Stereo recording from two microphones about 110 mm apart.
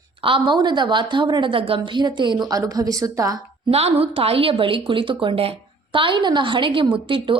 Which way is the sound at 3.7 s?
65° right (ahead or behind).